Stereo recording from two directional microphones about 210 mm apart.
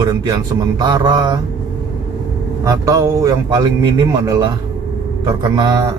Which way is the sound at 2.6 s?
15° right (ahead or behind).